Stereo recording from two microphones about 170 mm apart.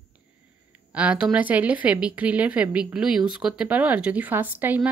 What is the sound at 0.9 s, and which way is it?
Speech, 5° right (ahead or behind).